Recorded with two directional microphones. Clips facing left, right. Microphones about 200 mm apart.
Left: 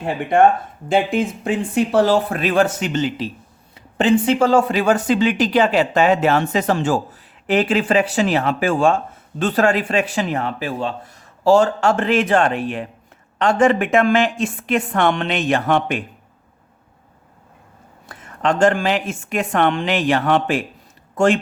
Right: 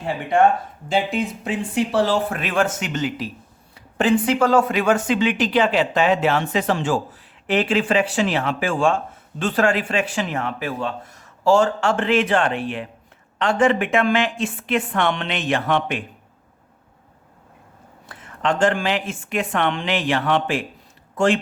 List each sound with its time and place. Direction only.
0.0 s speech: 55° left (ahead or behind)
18.0 s speech: 45° left (ahead or behind)